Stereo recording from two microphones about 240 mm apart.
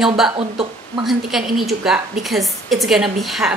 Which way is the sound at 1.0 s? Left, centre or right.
Centre.